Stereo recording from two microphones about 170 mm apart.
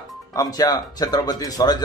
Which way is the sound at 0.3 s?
20° left (ahead or behind).